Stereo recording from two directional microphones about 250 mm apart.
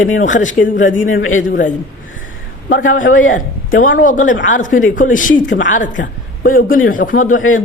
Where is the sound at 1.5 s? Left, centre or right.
Left.